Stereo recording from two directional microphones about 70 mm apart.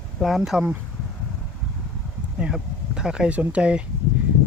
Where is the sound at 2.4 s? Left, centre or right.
Centre.